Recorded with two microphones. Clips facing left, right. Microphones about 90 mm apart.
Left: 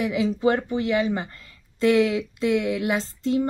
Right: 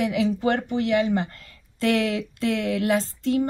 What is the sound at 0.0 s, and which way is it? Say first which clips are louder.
A woman's voice: left 1 dB; 20° left (ahead or behind).